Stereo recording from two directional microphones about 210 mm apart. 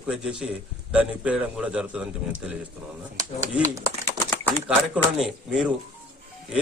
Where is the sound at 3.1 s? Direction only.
15° right (ahead or behind).